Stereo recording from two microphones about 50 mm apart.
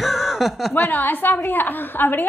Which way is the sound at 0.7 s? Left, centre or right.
Left.